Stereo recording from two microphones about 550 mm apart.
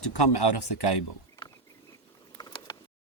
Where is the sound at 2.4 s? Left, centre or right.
Centre.